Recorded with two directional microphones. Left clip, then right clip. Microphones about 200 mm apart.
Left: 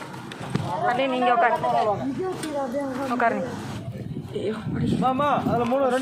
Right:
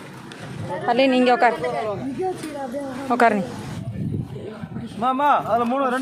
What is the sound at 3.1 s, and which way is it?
Speech, 90° right.